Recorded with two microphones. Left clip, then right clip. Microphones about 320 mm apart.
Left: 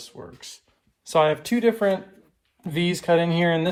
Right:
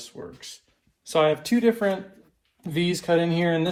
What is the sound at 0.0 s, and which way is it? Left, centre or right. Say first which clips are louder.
Speech: right 1 dB; centre.